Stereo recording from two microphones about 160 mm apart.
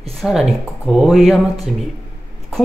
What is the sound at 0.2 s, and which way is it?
Speech, 5° right (ahead or behind).